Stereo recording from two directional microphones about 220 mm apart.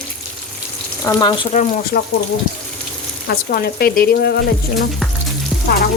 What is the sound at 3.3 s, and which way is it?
Speech, 45° left (ahead or behind).